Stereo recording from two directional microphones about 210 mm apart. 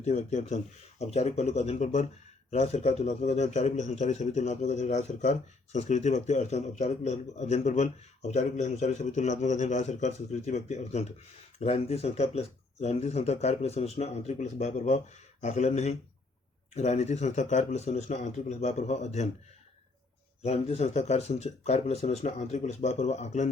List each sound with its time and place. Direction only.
0.0 s a man's voice: 35° left (ahead or behind)
20.4 s a man's voice: 30° left (ahead or behind)